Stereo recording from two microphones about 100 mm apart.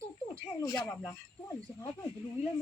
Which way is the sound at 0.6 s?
35° left (ahead or behind).